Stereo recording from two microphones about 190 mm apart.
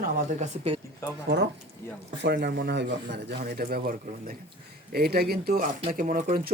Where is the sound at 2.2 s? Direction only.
60° right (ahead or behind).